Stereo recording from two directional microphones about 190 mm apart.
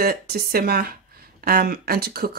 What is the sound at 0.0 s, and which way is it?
Speech, 55° right (ahead or behind).